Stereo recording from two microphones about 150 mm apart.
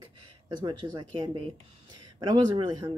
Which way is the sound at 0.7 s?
25° right (ahead or behind).